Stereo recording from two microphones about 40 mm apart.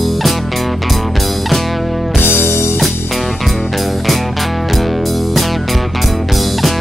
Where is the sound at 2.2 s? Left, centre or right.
Left.